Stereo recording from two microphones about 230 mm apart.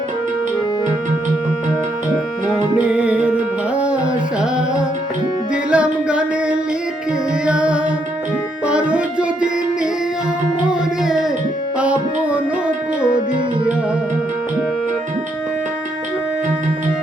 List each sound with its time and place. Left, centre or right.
2.5 s music: centre
5.7 s singing: centre
7.4 s music: centre
10.7 s music: centre